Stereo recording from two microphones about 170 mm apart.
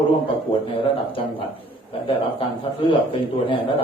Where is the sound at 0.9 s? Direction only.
30° left (ahead or behind).